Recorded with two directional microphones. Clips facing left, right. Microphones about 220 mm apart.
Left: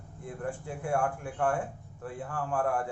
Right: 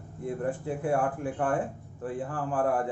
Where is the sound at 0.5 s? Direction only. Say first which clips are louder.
Right 7 dB; 35° right (ahead or behind).